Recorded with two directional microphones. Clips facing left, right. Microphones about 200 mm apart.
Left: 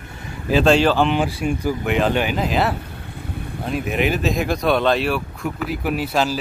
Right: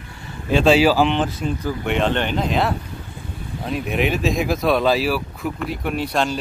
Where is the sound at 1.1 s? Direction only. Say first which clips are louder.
Left 1 dB; 10° left (ahead or behind).